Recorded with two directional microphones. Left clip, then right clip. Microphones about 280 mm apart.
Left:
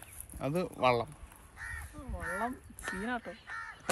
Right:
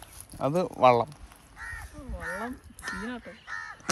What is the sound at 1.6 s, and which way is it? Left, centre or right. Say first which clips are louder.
Crow: right 3 dB; right.